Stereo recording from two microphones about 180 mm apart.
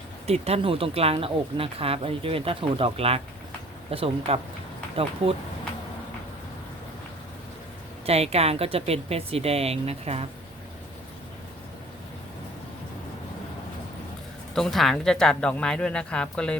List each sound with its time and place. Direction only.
0.3 s speech: 35° right (ahead or behind)
8.0 s speech: 35° right (ahead or behind)
14.5 s speech: centre (ahead or behind)